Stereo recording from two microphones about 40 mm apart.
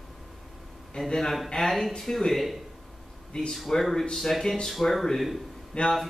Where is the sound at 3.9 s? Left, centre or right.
Centre.